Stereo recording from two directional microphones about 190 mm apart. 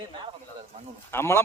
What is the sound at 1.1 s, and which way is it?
Speech, 10° left (ahead or behind).